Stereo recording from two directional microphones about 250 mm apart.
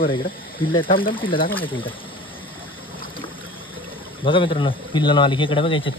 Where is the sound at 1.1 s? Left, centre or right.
Centre.